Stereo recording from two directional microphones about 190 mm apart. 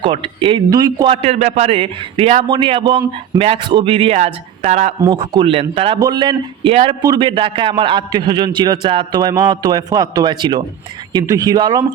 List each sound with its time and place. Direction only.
0.0 s a man's voice: 25° right (ahead or behind)
5.0 s speech: 25° right (ahead or behind)